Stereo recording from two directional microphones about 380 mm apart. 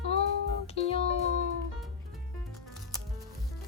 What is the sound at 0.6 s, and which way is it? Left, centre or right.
Music, centre.